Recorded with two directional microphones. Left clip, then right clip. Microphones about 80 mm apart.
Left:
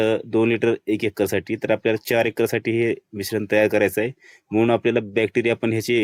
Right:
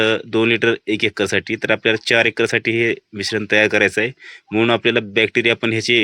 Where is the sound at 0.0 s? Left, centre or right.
Left.